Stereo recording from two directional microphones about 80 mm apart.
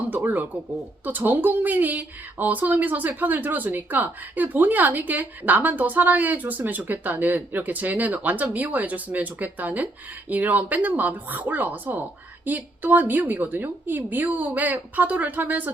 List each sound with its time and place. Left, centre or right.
0.1 s a woman's voice: right